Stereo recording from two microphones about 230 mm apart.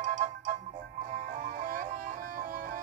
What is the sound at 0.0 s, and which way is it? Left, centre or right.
Music, right.